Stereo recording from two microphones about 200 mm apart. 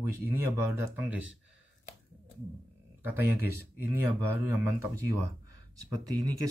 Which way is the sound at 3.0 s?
10° right (ahead or behind).